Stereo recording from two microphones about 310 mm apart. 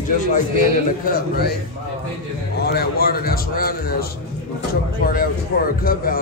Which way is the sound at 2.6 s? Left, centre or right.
Left.